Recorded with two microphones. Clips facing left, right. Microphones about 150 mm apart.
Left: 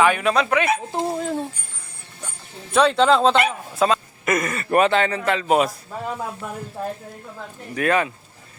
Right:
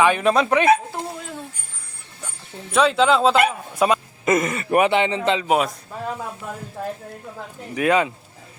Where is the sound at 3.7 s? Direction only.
15° right (ahead or behind).